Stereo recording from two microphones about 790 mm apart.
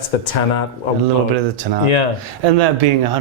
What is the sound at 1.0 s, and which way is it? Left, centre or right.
Speech, right.